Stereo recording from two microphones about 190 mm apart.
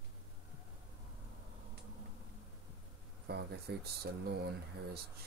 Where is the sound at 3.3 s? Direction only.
60° right (ahead or behind).